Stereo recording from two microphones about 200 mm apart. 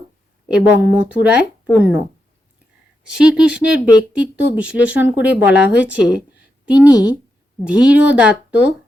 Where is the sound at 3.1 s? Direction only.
5° right (ahead or behind).